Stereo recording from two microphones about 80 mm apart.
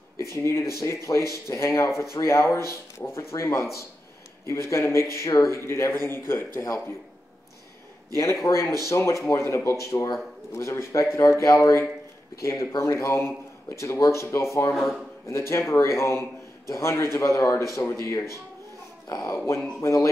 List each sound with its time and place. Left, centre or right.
0.3 s a man's voice: left
8.2 s a man's voice: left
14.7 s speech: centre
15.2 s a man's voice: left
19.0 s a man's voice: left